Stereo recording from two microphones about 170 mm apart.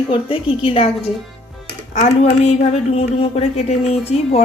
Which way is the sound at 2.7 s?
35° left (ahead or behind).